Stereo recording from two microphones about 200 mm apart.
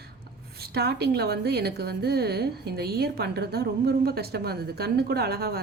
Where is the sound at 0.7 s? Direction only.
55° right (ahead or behind).